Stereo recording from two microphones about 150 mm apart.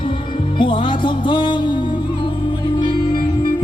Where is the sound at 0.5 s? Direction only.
35° left (ahead or behind).